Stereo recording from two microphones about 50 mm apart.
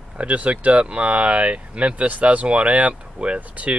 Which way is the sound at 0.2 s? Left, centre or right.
Right.